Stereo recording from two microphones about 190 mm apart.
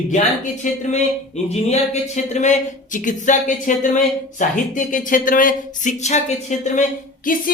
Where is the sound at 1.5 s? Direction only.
35° left (ahead or behind).